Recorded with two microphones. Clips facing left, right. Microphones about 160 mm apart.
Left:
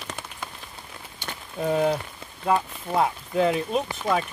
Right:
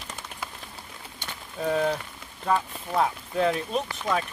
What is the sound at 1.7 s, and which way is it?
Speech, 10° left (ahead or behind).